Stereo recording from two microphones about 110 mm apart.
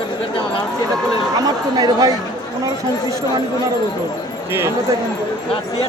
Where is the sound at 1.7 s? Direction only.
35° right (ahead or behind).